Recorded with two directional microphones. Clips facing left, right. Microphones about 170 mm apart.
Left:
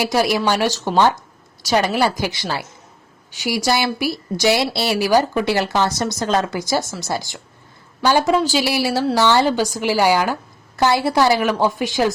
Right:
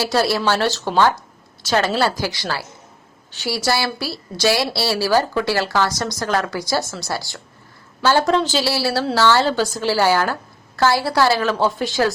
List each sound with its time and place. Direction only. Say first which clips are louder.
0.0 s a woman's voice: left 1 dB; 15° left (ahead or behind)
8.2 s a woman's voice: left 1 dB; 5° left (ahead or behind)